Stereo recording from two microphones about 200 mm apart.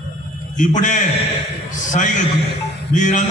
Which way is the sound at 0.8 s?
40° left (ahead or behind).